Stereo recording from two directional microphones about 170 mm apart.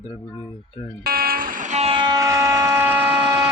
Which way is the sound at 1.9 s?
25° right (ahead or behind).